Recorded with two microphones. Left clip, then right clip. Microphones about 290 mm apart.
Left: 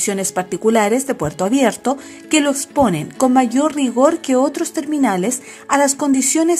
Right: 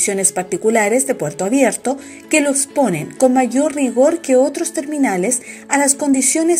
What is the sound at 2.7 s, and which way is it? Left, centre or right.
Speech, left.